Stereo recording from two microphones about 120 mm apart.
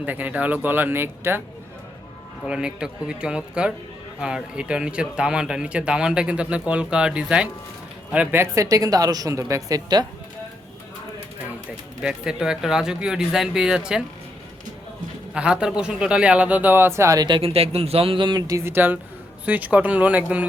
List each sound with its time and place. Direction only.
0.0 s speech: 15° right (ahead or behind)
2.4 s speech: 5° right (ahead or behind); by 10.1 s 30° right (ahead or behind)
12.0 s speech: 5° right (ahead or behind)
15.3 s a man's voice: 10° right (ahead or behind); by 17.2 s 25° right (ahead or behind)
17.2 s speech: 45° right (ahead or behind); by 20.5 s 15° right (ahead or behind)